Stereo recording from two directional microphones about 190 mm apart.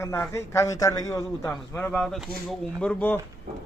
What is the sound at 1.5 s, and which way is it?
A man's voice, 5° left (ahead or behind).